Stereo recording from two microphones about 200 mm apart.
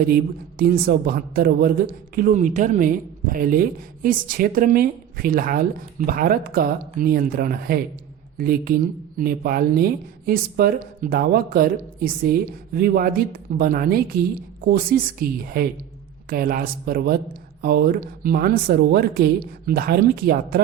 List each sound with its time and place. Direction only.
0.6 s speech: 45° right (ahead or behind)